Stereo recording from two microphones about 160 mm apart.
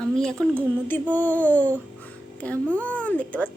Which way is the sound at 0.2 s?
5° left (ahead or behind).